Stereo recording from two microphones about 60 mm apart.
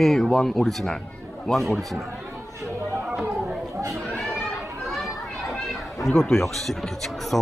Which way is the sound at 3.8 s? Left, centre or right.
Right.